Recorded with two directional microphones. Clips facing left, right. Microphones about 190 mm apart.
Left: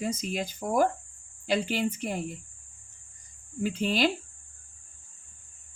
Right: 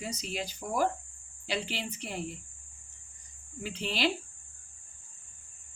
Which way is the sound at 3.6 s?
45° left (ahead or behind).